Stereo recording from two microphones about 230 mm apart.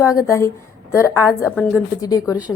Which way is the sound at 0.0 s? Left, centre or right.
Centre.